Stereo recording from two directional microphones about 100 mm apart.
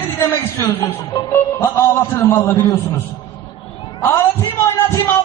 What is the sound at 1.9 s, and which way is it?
Speech, 25° left (ahead or behind).